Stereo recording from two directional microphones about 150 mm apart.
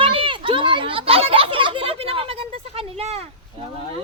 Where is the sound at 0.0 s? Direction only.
35° right (ahead or behind).